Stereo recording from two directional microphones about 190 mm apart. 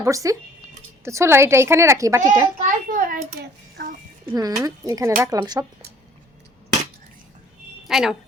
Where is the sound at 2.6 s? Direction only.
45° right (ahead or behind).